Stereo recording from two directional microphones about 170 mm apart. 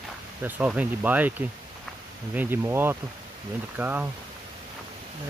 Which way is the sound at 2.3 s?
10° right (ahead or behind).